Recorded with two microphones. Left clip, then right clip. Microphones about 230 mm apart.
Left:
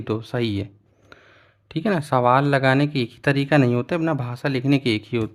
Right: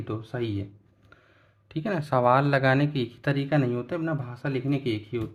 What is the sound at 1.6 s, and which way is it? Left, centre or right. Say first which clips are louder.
Speech: left 7 dB; left.